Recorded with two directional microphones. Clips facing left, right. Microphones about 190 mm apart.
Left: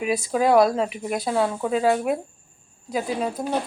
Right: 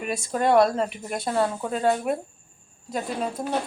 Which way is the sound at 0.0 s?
Centre (ahead or behind).